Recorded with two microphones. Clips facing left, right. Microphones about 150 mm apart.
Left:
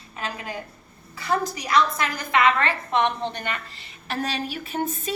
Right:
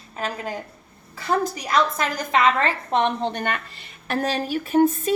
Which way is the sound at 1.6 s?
45° right (ahead or behind).